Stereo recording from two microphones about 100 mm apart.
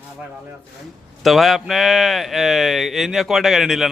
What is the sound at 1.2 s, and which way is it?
Speech, centre (ahead or behind).